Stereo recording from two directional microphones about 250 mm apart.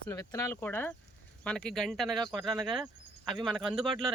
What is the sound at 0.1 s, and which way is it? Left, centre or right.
Speech, centre.